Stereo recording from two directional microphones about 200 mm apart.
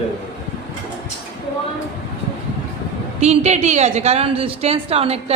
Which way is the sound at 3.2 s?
35° right (ahead or behind).